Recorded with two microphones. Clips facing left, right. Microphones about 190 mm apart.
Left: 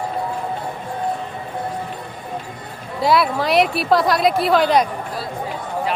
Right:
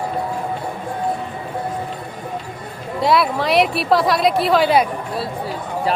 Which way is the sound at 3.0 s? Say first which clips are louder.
Even; centre (ahead or behind).